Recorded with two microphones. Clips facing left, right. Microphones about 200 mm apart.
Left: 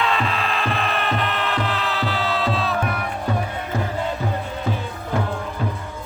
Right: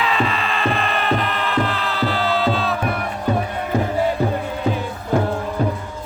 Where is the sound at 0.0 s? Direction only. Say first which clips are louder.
Right 2 dB; centre (ahead or behind).